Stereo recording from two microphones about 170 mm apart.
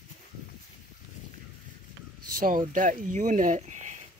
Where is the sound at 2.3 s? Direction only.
55° right (ahead or behind).